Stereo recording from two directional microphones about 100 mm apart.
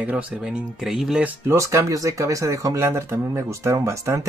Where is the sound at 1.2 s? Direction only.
25° right (ahead or behind).